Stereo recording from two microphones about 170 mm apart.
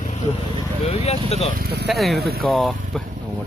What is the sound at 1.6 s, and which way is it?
Speech, 75° right (ahead or behind).